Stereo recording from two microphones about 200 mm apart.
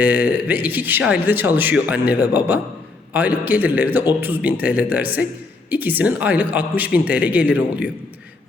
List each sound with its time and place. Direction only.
0.0 s a man's voice: 10° right (ahead or behind)